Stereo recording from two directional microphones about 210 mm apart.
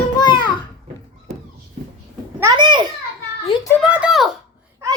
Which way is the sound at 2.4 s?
20° right (ahead or behind).